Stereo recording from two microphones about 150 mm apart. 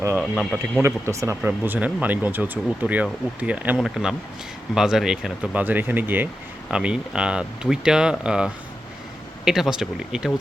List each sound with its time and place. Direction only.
0.2 s speech: centre (ahead or behind)
0.8 s speech: 20° right (ahead or behind); by 10.3 s 5° right (ahead or behind)